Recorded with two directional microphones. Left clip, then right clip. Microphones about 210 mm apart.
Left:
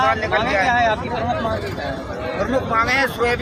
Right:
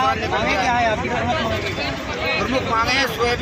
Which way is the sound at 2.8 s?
25° left (ahead or behind).